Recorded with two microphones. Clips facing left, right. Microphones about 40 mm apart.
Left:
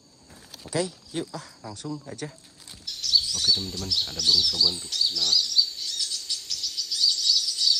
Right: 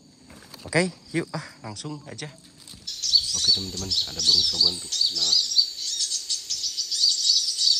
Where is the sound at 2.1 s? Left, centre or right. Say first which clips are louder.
Left 1 dB; right.